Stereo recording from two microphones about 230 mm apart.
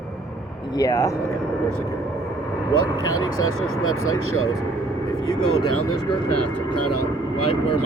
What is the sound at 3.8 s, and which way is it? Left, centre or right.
Speech, left.